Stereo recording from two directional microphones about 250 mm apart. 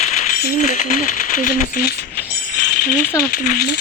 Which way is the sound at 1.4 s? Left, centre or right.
Left.